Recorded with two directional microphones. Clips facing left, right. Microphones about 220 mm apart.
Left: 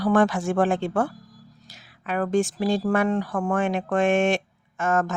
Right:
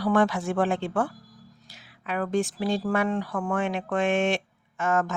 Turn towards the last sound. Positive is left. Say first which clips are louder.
# left 2 dB
turn(degrees=45)  # may be behind; listen again after turning